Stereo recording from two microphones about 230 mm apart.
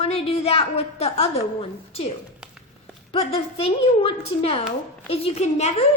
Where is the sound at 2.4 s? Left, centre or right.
Centre.